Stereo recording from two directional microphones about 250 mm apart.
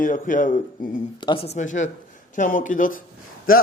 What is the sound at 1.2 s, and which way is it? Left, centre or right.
Speech, left.